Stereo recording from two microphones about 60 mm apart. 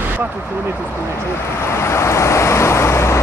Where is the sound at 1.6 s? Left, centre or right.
Left.